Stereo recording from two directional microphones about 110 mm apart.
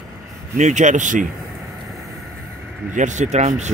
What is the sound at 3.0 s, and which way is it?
Speech, 90° right.